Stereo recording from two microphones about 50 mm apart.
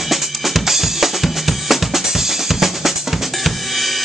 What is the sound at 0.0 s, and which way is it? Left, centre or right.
Drum kit, centre.